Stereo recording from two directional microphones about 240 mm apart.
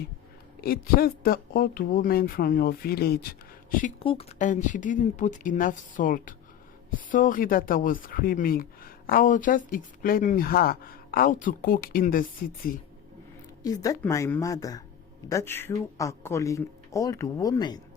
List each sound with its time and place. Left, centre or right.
0.6 s speech: left
4.0 s speech: left
13.6 s speech: centre